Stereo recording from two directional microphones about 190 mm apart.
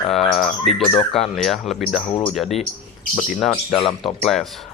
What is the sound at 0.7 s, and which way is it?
Speech, 30° left (ahead or behind).